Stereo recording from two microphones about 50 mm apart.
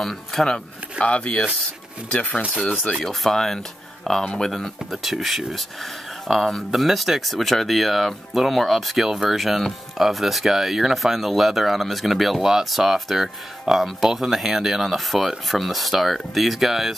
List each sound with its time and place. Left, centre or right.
0.0 s speech: centre
0.9 s speech: left
2.9 s speech: centre
4.5 s speech: centre